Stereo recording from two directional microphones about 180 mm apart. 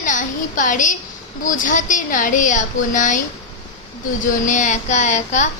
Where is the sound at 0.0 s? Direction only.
45° left (ahead or behind).